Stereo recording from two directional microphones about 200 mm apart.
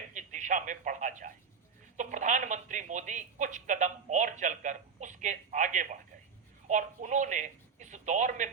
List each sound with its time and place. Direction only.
0.1 s radio: 40° right (ahead or behind)
2.0 s a woman's voice: 40° right (ahead or behind)